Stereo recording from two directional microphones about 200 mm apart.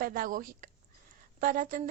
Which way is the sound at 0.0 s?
45° right (ahead or behind).